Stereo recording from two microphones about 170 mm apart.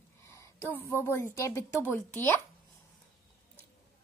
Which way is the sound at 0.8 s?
15° left (ahead or behind).